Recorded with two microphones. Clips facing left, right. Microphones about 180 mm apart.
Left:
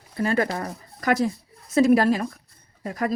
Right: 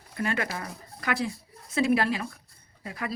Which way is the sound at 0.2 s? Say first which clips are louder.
Left 7 dB; 40° left (ahead or behind).